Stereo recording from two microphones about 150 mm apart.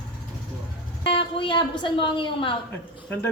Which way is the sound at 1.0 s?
35° left (ahead or behind).